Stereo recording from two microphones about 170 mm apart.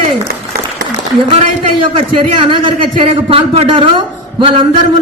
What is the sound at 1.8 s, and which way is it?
A man's voice, 30° right (ahead or behind).